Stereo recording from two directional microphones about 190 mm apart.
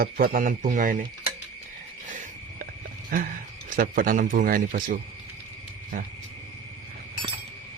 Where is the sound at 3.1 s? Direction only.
45° right (ahead or behind).